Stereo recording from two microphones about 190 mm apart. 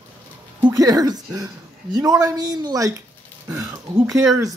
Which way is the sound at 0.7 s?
20° right (ahead or behind).